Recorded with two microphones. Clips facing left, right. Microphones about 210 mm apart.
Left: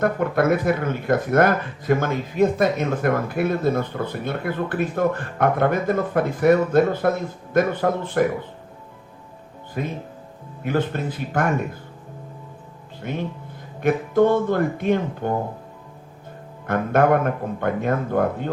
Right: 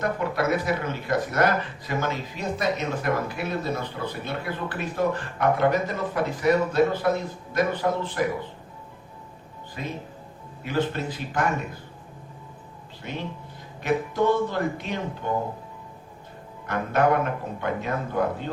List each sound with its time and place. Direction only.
0.0 s speech: 50° left (ahead or behind)
9.8 s speech: 50° left (ahead or behind)
13.0 s speech: 50° left (ahead or behind)
16.6 s speech: 50° left (ahead or behind)